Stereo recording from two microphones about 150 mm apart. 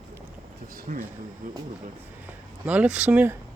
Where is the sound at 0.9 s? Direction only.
55° right (ahead or behind).